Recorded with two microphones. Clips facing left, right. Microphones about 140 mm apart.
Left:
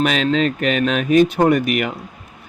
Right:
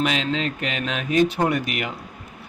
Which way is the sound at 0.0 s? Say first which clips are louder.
Left 6 dB; 60° left (ahead or behind).